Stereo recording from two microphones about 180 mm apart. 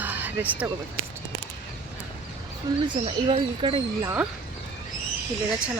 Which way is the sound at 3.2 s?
30° right (ahead or behind).